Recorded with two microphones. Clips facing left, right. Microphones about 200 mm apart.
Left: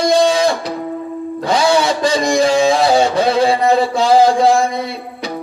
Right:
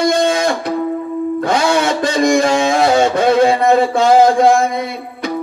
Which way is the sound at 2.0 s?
55° right (ahead or behind).